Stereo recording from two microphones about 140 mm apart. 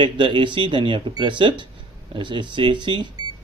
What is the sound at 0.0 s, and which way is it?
Speech, 35° right (ahead or behind).